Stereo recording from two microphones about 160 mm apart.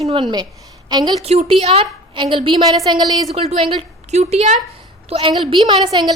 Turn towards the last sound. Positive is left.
turn(degrees=-25)  # may be behind; listen again after turning